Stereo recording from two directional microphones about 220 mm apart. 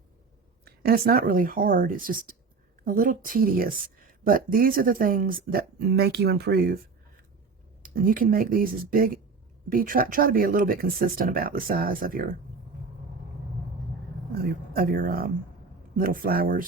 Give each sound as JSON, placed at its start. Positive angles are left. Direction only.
{"t": 0.6, "sound": "speech", "side_deg": -45}
{"t": 7.8, "sound": "speech", "side_deg": -40}
{"t": 14.3, "sound": "speech", "side_deg": -40}